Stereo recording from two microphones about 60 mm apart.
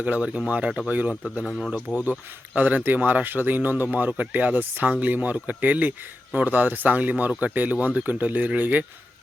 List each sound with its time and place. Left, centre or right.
0.0 s speech: right
1.9 s speech: centre
2.6 s speech: right